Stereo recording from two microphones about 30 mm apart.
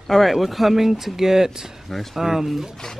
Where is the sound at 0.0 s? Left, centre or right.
Centre.